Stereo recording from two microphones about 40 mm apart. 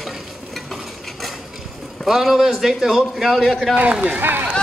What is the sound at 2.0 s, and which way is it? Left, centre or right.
A man's voice, centre.